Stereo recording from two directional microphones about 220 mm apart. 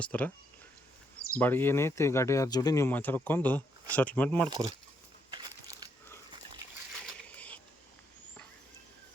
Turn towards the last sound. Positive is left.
turn(degrees=5)  # may be behind; listen again after turning